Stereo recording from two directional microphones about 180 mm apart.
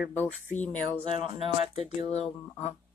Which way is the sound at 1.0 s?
30° right (ahead or behind).